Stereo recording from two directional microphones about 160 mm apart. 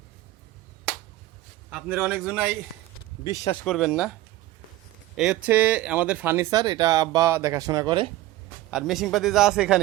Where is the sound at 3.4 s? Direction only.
25° left (ahead or behind).